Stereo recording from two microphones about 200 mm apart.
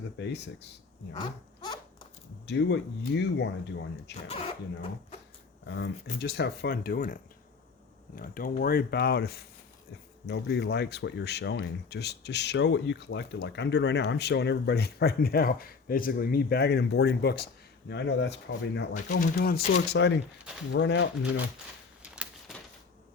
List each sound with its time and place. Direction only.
0.2 s speech: 60° left (ahead or behind)
1.1 s a sound: 20° left (ahead or behind)
2.5 s speech: 60° left (ahead or behind)
4.3 s speech: 25° left (ahead or behind)
5.6 s speech: 60° left (ahead or behind)
19.2 s speech: 50° left (ahead or behind)
22.1 s a sound: 5° right (ahead or behind)